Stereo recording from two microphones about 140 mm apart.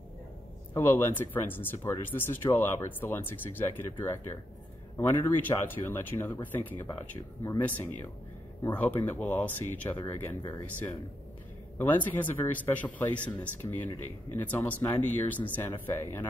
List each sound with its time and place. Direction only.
0.7 s speech: 15° left (ahead or behind)
4.9 s speech: 15° left (ahead or behind)